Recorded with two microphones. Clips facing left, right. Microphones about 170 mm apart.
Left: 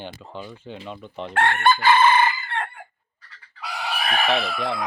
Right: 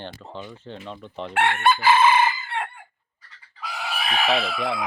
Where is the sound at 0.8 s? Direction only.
5° left (ahead or behind).